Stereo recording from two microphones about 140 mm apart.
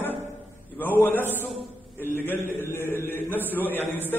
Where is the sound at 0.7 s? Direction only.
15° left (ahead or behind).